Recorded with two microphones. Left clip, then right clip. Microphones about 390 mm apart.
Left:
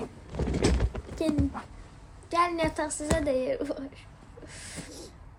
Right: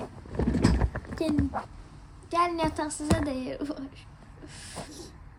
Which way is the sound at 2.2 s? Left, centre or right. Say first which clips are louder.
Even; centre.